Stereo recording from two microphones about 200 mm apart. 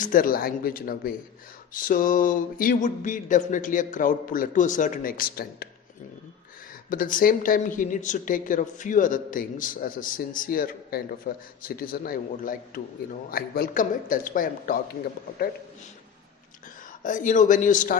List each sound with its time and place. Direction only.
0.0 s a woman's voice: 45° left (ahead or behind)
6.9 s a woman's voice: 45° left (ahead or behind)
17.0 s speech: 40° left (ahead or behind)